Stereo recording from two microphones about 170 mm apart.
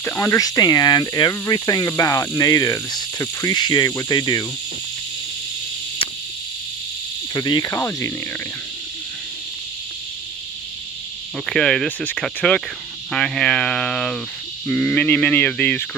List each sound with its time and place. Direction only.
0.0 s speech: 10° left (ahead or behind)
7.3 s speech: 25° left (ahead or behind)
11.4 s speech: 5° left (ahead or behind)